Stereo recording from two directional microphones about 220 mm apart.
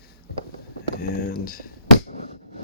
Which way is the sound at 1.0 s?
40° left (ahead or behind).